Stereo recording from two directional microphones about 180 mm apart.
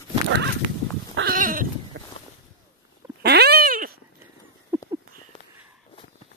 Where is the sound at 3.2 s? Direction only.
65° right (ahead or behind).